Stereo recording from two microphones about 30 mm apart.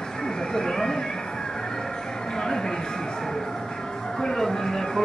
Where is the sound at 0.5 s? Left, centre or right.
Left.